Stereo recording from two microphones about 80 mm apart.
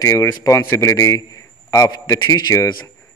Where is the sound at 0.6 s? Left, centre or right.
Left.